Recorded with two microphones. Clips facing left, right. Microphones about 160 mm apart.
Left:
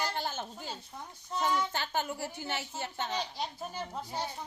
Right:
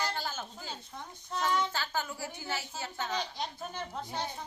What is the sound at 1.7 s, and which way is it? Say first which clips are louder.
A woman's voice: left 2 dB; 20° left (ahead or behind).